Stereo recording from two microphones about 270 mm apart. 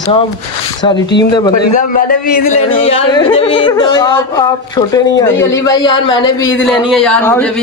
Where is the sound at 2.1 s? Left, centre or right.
Left.